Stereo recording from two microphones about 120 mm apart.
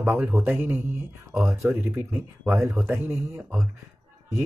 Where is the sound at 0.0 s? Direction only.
20° right (ahead or behind).